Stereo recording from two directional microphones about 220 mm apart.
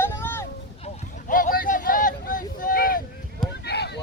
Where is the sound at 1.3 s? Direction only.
40° left (ahead or behind).